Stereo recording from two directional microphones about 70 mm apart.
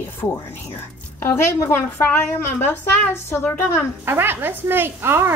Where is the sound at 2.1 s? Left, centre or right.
Left.